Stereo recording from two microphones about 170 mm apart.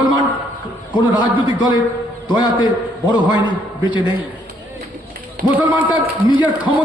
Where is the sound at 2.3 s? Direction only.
25° left (ahead or behind).